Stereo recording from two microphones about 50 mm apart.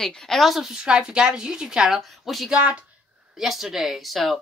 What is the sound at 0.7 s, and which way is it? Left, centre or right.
Speech, centre.